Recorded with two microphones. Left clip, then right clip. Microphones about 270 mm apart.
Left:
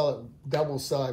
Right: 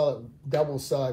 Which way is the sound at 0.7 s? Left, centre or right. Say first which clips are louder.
Right 1 dB; left.